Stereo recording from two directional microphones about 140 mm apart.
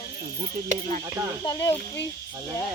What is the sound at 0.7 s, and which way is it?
Cricket, 65° right (ahead or behind).